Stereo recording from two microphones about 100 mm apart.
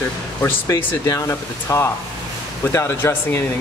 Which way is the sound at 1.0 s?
35° left (ahead or behind).